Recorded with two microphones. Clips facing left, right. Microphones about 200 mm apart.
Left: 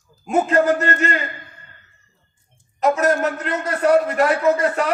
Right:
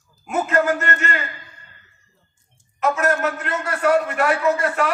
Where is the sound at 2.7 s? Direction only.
35° left (ahead or behind).